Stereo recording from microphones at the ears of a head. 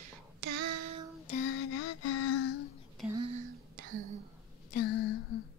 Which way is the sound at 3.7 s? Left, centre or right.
Right.